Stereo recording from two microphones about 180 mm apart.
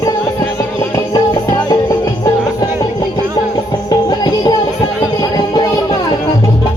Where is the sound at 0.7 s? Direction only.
25° left (ahead or behind).